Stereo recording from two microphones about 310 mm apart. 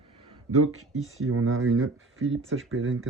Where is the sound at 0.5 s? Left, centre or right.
Right.